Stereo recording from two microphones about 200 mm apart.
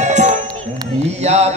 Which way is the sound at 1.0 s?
30° right (ahead or behind).